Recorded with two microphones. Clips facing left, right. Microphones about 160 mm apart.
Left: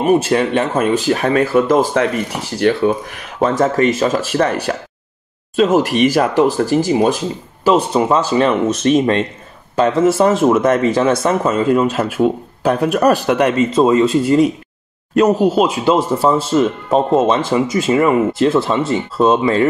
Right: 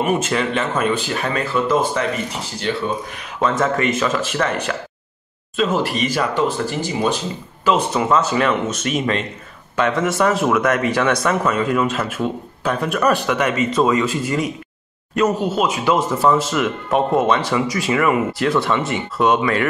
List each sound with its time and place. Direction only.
0.0 s speech: 40° left (ahead or behind)
2.6 s speech: 55° left (ahead or behind)
3.3 s speech: 35° left (ahead or behind)
7.6 s speech: 35° left (ahead or behind)